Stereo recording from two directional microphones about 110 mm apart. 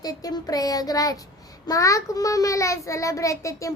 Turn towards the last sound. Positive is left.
turn(degrees=30)  # may be behind; listen again after turning